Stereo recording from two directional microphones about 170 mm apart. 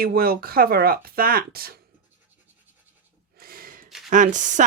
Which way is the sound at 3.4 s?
60° right (ahead or behind).